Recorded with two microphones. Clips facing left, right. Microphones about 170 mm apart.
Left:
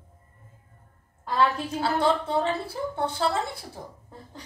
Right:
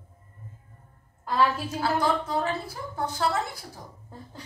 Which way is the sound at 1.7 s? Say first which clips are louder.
Left 2 dB; 30° left (ahead or behind).